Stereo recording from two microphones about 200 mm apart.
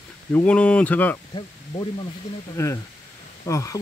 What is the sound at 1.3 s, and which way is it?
Speech, 25° left (ahead or behind).